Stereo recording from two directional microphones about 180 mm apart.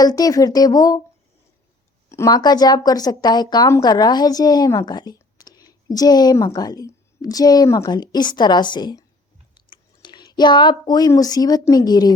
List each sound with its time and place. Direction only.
0.0 s a woman's voice: 20° left (ahead or behind)
2.0 s a woman's voice: 15° left (ahead or behind)